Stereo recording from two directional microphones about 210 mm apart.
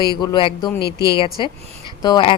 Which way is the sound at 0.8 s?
50° left (ahead or behind).